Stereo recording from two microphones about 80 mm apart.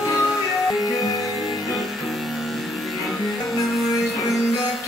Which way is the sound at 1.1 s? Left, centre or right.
Left.